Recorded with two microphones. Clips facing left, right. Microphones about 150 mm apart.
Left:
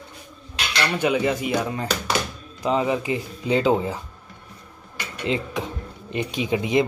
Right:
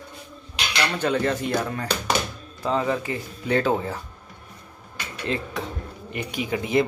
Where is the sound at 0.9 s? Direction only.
10° left (ahead or behind).